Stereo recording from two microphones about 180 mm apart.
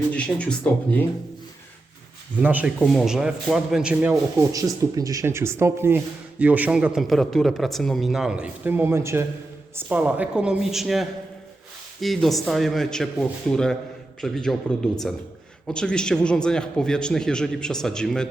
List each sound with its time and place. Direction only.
0.1 s speech: 5° left (ahead or behind)
2.4 s a man's voice: 10° right (ahead or behind)
4.1 s a man's voice: 20° right (ahead or behind); by 14.5 s centre (ahead or behind)
15.6 s a man's voice: 5° left (ahead or behind)